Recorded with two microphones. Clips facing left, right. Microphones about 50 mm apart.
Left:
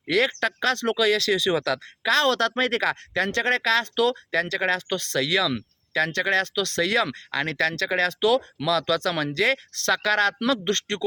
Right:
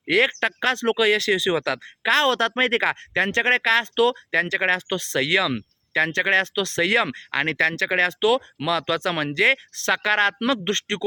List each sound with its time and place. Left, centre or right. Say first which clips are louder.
0.3 s speech: right 1 dB; right